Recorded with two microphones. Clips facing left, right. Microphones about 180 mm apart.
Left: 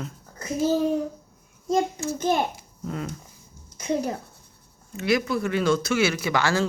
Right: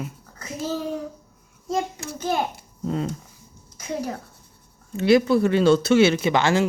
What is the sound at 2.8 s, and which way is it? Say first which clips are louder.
Speech: right 6 dB; 30° right (ahead or behind).